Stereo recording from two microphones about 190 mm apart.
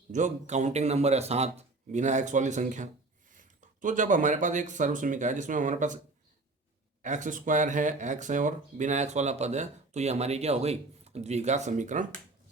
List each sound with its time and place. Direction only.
0.1 s speech: 40° right (ahead or behind)
7.0 s speech: 40° right (ahead or behind)